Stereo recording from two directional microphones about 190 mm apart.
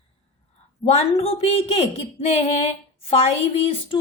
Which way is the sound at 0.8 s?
30° left (ahead or behind).